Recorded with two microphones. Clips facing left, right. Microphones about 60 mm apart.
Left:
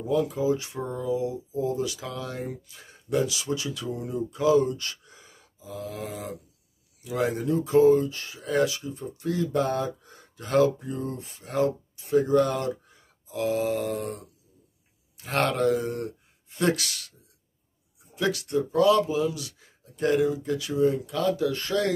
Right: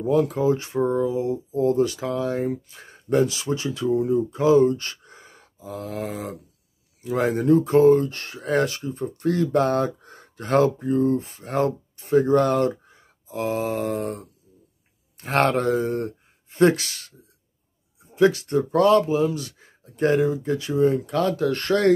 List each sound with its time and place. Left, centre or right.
0.0 s speech: right
0.3 s speech: right
0.6 s speech: right
1.5 s speech: right
1.9 s speech: right
7.0 s speech: right
18.7 s speech: right
18.9 s speech: right
20.8 s speech: right